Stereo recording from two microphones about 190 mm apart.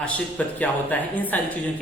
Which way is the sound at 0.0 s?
5° left (ahead or behind).